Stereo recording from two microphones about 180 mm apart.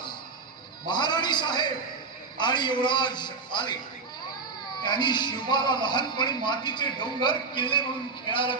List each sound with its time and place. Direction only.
0.9 s a man's voice: 25° left (ahead or behind)
4.8 s speech: 25° left (ahead or behind)